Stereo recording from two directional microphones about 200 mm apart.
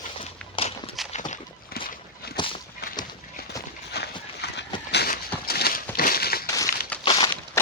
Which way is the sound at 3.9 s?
55° left (ahead or behind).